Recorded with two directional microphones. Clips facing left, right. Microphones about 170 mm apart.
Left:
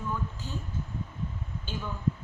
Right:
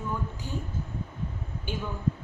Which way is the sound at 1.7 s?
15° right (ahead or behind).